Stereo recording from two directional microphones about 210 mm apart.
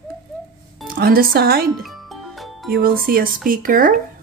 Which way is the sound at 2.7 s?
45° right (ahead or behind).